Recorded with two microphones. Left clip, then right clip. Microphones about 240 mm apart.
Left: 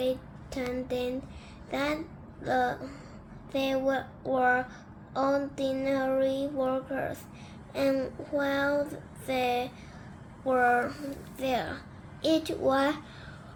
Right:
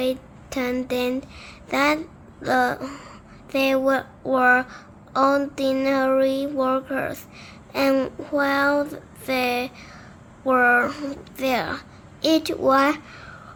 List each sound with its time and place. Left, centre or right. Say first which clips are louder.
0.0 s a woman's voice: right 5 dB; right